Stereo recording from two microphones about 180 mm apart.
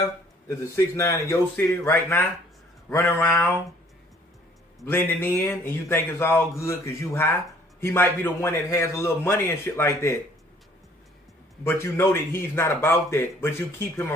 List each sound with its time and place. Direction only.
0.0 s a man's voice: 15° left (ahead or behind)
4.8 s a man's voice: 10° left (ahead or behind)
11.6 s a man's voice: 15° left (ahead or behind)